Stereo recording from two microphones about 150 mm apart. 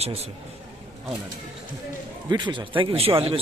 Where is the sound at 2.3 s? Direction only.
30° right (ahead or behind).